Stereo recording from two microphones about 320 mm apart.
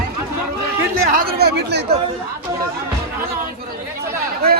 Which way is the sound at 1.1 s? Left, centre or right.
Right.